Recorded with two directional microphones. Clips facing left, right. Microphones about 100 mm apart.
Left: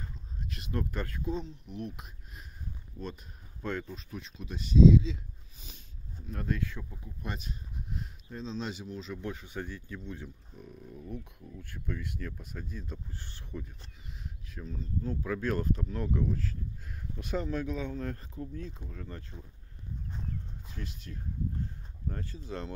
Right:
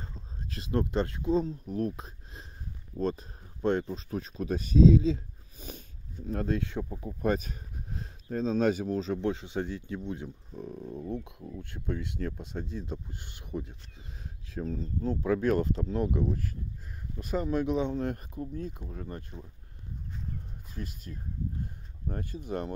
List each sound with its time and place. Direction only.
0.0 s a sound: 30° right (ahead or behind)
0.9 s speech: 25° right (ahead or behind)
1.3 s speech: 40° right (ahead or behind)
6.3 s speech: 30° right (ahead or behind)
6.8 s speech: 45° right (ahead or behind)
8.3 s speech: 50° right (ahead or behind); by 10.3 s 20° right (ahead or behind)
10.6 s speech: 35° right (ahead or behind); by 13.7 s 20° right (ahead or behind)
14.5 s speech: 40° right (ahead or behind)
17.2 s speech: 5° right (ahead or behind)
17.5 s speech: 20° right (ahead or behind)
20.8 s speech: 45° right (ahead or behind)
22.4 s speech: 15° right (ahead or behind)